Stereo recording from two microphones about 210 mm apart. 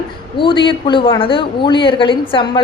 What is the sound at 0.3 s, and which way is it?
A woman's voice, 25° left (ahead or behind).